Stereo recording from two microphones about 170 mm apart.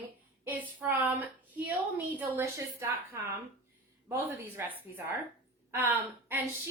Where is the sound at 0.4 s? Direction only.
10° right (ahead or behind).